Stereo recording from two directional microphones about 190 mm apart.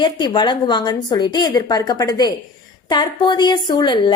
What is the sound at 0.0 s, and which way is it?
Speech, 25° left (ahead or behind).